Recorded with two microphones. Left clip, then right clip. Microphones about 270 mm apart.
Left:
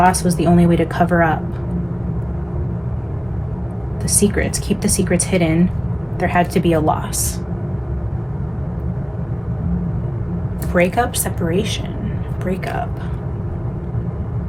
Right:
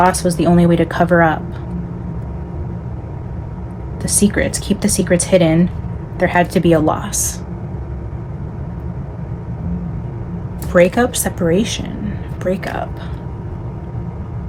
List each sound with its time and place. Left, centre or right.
0.0 s speech: right
4.0 s speech: right
10.9 s speech: right